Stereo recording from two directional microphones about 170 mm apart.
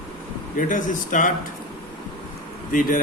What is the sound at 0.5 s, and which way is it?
Speech, 50° left (ahead or behind).